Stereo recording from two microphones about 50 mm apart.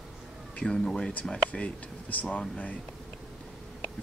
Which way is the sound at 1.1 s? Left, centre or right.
Left.